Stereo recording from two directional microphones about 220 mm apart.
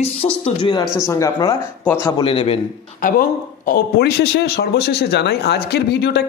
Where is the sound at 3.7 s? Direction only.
50° left (ahead or behind).